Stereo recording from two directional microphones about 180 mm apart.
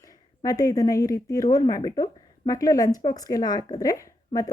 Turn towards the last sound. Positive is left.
turn(degrees=20)  # may be behind; listen again after turning